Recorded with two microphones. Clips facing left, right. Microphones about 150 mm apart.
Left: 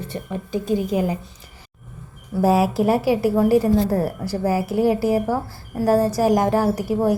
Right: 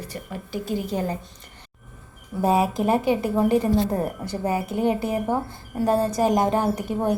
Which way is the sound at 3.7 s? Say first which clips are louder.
Left 3 dB; 20° right (ahead or behind).